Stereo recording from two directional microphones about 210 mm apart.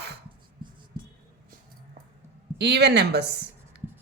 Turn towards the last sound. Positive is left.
turn(degrees=-50)  # may be behind; listen again after turning